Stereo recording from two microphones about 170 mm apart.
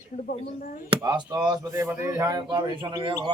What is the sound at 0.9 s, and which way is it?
Speech, 25° right (ahead or behind).